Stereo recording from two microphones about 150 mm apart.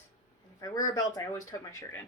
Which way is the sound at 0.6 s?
25° left (ahead or behind).